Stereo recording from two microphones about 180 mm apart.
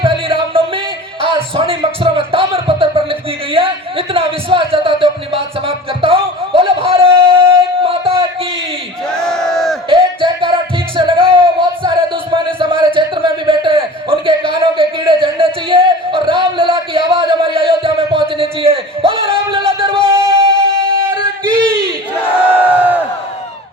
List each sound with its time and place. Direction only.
0.0 s music: 30° right (ahead or behind)
9.0 s crowd: 5° left (ahead or behind)
9.9 s music: 30° right (ahead or behind)
21.4 s a sound: 25° right (ahead or behind)
22.8 s crowd: 10° right (ahead or behind)